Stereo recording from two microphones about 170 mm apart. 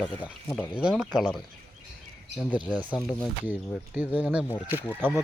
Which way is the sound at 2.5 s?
10° right (ahead or behind).